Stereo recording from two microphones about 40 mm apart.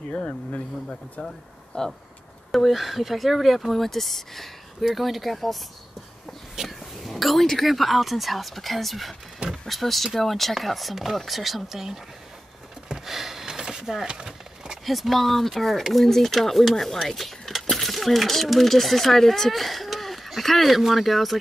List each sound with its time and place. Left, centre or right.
0.1 s speech: left
1.7 s speech: left
2.5 s speech: centre
6.5 s a sound: centre
7.5 s speech: centre
12.8 s a sound: centre
14.9 s speech: centre